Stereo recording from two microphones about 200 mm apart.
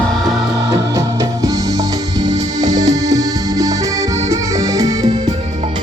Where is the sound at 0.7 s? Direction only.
15° right (ahead or behind).